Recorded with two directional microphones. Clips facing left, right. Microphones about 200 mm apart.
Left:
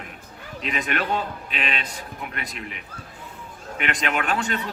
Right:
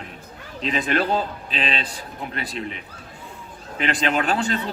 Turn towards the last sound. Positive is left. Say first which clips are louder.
# right 3 dB
turn(degrees=-30)  # may be behind; listen again after turning